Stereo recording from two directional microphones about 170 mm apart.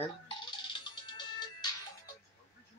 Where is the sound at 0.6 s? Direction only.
30° left (ahead or behind).